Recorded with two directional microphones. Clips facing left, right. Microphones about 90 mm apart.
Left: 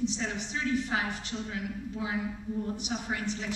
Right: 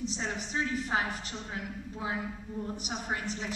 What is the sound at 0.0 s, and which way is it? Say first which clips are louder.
A man's voice: left 3 dB; 40° right (ahead or behind).